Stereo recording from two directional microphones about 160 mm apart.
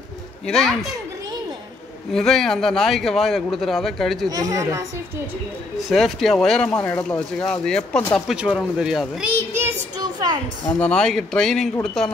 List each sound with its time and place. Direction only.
0.5 s speech: 5° left (ahead or behind)
2.1 s speech: centre (ahead or behind)
4.3 s a woman's voice: 20° right (ahead or behind)
5.9 s speech: centre (ahead or behind)
9.4 s child singing: 15° right (ahead or behind)
10.8 s speech: 5° left (ahead or behind)